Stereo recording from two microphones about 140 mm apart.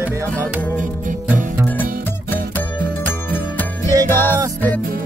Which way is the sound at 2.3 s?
15° left (ahead or behind).